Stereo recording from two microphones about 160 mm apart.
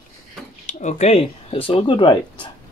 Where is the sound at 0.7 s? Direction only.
50° left (ahead or behind); by 2.4 s 30° left (ahead or behind).